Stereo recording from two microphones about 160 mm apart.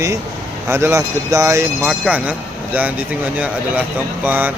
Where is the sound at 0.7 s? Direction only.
15° right (ahead or behind).